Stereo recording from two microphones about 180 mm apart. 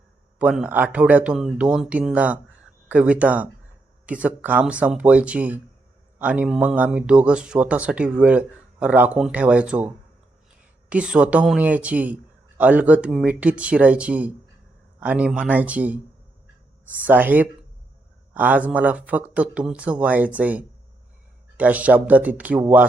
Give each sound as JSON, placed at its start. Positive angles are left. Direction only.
{"t": 0.3, "sound": "speech", "side_deg": -5}